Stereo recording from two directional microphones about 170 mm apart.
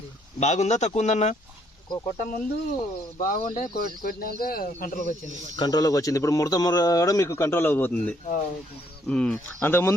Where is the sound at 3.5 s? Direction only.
55° left (ahead or behind).